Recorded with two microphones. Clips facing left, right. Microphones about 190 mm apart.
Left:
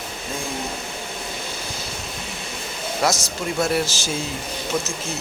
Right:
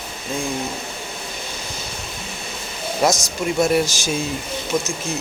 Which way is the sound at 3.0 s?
20° right (ahead or behind).